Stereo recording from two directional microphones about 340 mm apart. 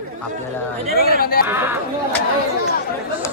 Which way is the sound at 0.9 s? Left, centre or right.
Left.